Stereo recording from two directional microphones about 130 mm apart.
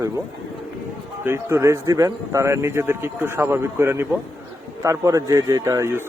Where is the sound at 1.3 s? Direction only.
20° right (ahead or behind).